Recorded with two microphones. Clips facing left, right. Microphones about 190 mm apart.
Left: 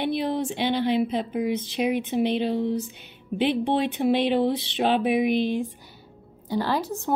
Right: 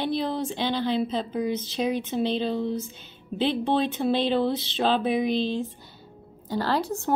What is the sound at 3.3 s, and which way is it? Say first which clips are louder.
A woman's voice: left 1 dB; 15° left (ahead or behind).